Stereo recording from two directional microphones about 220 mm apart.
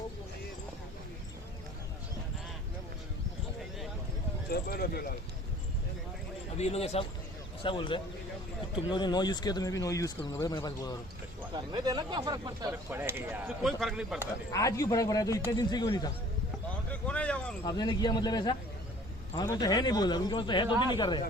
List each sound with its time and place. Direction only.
4.4 s speech: 45° left (ahead or behind)
6.6 s speech: 30° left (ahead or behind)
11.7 s speech: 20° right (ahead or behind); by 14.3 s 5° right (ahead or behind)
14.5 s speech: 15° left (ahead or behind)
16.9 s a sound: 5° left (ahead or behind)
17.7 s speech: 20° left (ahead or behind)